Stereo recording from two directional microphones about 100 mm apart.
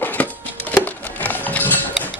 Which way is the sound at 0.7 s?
15° left (ahead or behind).